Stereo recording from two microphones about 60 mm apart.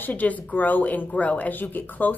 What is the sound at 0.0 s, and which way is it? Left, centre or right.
A woman's voice, left.